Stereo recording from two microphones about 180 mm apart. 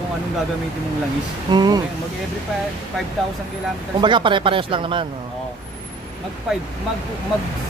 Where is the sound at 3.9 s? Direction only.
25° right (ahead or behind).